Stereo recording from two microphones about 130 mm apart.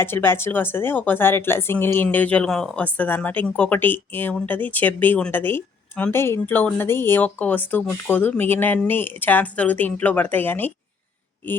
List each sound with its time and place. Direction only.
0.0 s speech: 20° left (ahead or behind)